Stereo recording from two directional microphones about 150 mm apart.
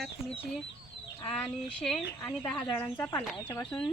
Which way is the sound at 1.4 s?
5° left (ahead or behind).